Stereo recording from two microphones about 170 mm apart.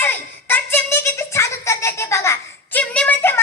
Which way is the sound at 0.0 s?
10° left (ahead or behind).